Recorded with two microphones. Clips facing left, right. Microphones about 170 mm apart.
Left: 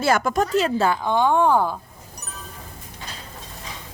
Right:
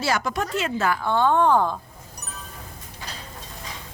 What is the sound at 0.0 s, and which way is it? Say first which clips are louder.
Speech: left 5 dB; 50° left (ahead or behind).